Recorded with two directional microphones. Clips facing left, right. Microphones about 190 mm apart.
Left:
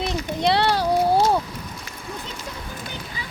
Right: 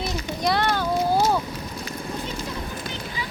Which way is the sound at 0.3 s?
30° left (ahead or behind).